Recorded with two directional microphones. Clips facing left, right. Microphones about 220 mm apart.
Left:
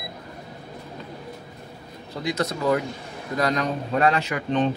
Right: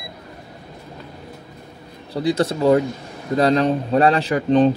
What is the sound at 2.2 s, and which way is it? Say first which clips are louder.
A man's voice: right 7 dB; 30° right (ahead or behind).